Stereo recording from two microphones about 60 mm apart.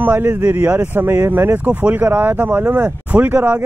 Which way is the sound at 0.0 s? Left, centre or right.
Right.